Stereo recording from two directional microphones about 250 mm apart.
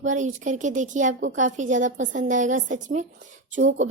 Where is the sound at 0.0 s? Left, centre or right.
Right.